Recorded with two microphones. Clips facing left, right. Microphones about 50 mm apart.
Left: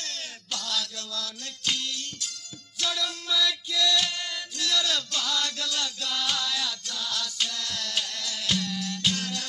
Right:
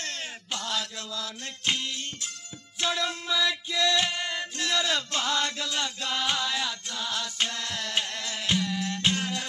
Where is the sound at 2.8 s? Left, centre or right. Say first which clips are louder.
Right 2 dB; right.